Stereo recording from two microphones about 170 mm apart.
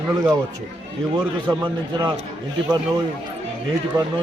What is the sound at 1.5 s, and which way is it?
Speech, 20° right (ahead or behind).